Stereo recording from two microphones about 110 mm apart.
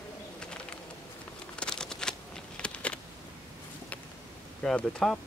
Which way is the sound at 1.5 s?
5° left (ahead or behind).